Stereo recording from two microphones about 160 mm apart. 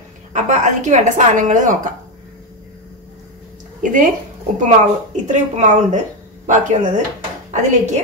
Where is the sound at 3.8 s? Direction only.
55° right (ahead or behind).